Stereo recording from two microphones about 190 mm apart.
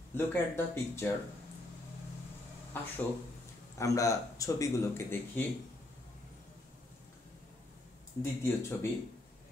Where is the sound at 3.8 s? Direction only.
15° left (ahead or behind).